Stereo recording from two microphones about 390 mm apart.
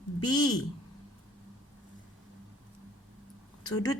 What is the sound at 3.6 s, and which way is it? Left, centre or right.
Speech, centre.